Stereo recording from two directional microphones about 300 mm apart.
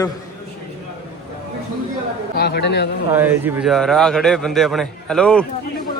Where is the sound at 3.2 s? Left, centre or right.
Centre.